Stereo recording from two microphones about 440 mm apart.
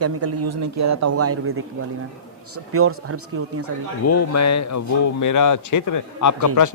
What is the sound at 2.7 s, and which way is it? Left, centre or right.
Speech, right.